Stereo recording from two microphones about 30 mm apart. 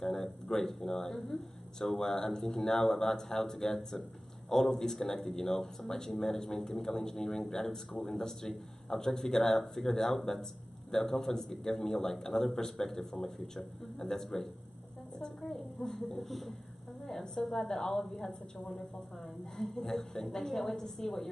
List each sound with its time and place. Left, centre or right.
0.0 s a sound: centre
0.9 s speech: centre
13.9 s speech: centre
16.2 s speech: centre
17.6 s a woman's voice: left
19.5 s speech: centre